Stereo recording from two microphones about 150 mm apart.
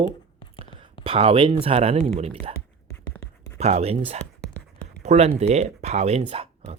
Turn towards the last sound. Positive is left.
turn(degrees=-40)  # may be behind; listen again after turning